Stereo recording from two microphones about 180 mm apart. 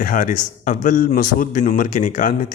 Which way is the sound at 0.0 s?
50° left (ahead or behind).